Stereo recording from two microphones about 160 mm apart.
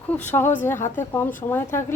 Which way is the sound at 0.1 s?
10° left (ahead or behind).